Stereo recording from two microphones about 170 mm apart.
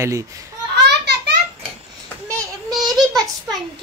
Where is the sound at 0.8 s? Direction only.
80° right.